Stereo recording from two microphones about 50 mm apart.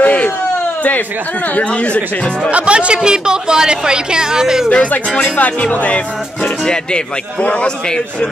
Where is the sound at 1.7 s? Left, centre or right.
Left.